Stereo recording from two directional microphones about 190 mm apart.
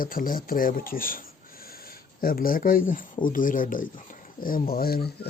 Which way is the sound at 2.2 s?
50° left (ahead or behind).